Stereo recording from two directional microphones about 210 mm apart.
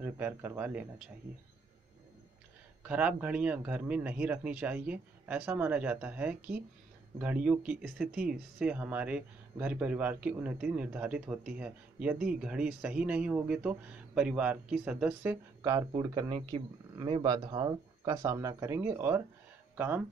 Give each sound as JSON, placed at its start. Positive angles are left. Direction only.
{"t": 0.0, "sound": "speech", "side_deg": -10}
{"t": 2.8, "sound": "speech", "side_deg": -5}